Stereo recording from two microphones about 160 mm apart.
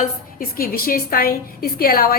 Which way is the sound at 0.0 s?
60° left (ahead or behind).